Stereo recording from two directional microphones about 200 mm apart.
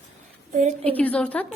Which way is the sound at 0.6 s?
40° right (ahead or behind).